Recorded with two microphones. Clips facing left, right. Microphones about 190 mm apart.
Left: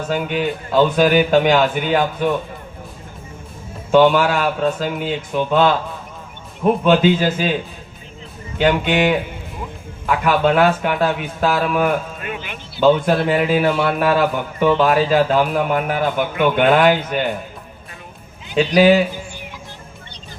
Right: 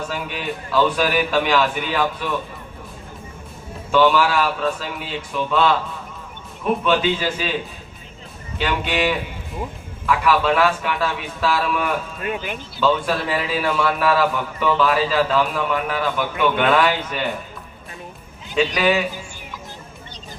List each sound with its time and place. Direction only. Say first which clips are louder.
0.1 s a man's voice: left 7 dB; 45° left (ahead or behind)
3.9 s a man's voice: left 3 dB; 45° left (ahead or behind)
6.8 s a man's voice: left 6 dB; 45° left (ahead or behind)
8.5 s a man's voice: left 6 dB; 55° left (ahead or behind)
12.2 s speech: right 3 dB; 40° right (ahead or behind)
12.8 s a man's voice: left 6 dB; 50° left (ahead or behind)
18.5 s a man's voice: left 6 dB; 40° left (ahead or behind)